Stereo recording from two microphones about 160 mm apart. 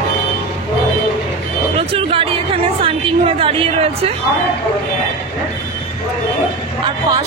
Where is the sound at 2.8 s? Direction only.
35° right (ahead or behind).